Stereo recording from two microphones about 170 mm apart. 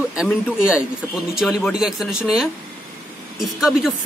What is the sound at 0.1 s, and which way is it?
Speech, 5° right (ahead or behind).